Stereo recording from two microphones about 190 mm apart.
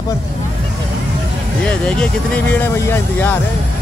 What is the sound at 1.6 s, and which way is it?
Speech, 5° left (ahead or behind).